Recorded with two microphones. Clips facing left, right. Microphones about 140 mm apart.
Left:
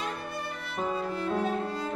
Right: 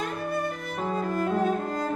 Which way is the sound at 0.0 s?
45° right (ahead or behind).